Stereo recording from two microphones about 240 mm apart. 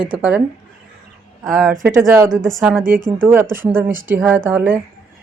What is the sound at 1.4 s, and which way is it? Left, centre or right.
A woman's voice, centre.